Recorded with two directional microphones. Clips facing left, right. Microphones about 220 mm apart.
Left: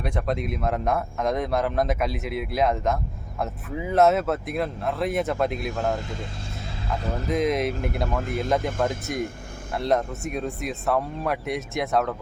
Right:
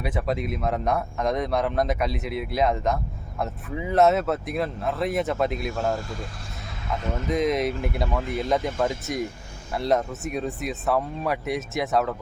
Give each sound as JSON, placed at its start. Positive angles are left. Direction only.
{"t": 0.0, "sound": "speech", "side_deg": -5}
{"t": 6.0, "sound": "speech", "side_deg": 20}
{"t": 6.8, "sound": "speech", "side_deg": 35}
{"t": 7.3, "sound": "speech", "side_deg": 0}